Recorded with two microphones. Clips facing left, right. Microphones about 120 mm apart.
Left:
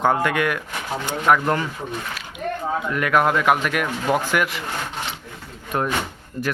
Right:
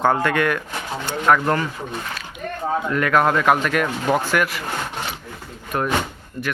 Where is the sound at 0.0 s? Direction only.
15° left (ahead or behind).